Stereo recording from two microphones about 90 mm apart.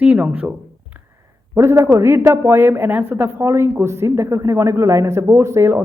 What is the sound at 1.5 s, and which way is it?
A woman's voice, 30° right (ahead or behind).